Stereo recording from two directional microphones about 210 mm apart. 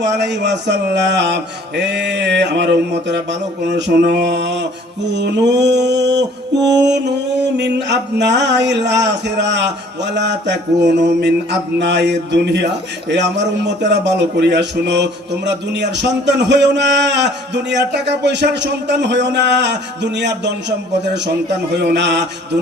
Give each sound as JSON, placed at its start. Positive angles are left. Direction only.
{"t": 0.0, "sound": "a man's voice", "side_deg": -55}
{"t": 21.8, "sound": "mantra", "side_deg": -55}